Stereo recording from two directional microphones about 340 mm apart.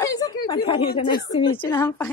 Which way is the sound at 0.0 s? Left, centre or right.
Centre.